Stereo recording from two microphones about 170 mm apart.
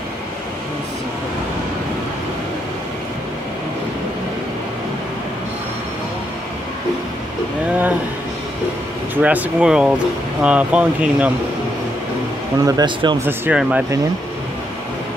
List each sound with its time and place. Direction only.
9.1 s speech: 10° right (ahead or behind)
12.6 s speech: 25° right (ahead or behind)
13.2 s speech: 5° right (ahead or behind)